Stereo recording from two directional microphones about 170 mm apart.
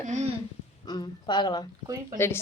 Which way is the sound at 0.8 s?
25° left (ahead or behind).